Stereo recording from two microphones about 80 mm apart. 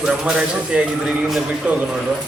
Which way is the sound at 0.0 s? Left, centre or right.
Centre.